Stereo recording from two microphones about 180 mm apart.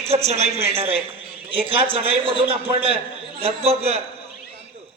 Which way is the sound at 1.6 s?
30° right (ahead or behind).